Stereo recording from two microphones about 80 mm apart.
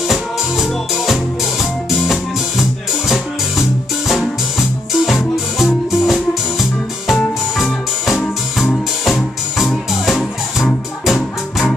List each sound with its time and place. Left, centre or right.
0.1 s music: centre
4.1 s music: centre